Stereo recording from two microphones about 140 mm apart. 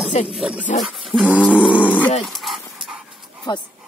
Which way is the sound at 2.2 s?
Centre (ahead or behind).